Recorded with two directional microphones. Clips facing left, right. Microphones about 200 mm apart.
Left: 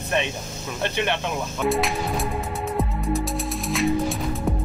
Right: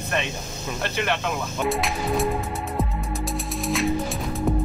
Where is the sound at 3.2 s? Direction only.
Centre (ahead or behind).